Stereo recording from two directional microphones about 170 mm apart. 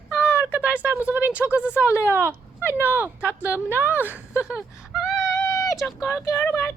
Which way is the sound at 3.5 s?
10° right (ahead or behind).